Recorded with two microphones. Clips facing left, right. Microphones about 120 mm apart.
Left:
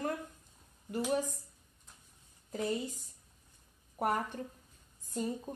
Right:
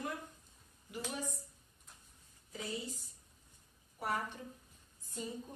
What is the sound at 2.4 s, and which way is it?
A woman's voice, 50° left (ahead or behind).